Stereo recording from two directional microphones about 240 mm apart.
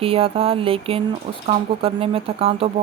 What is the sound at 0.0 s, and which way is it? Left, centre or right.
Speech, right.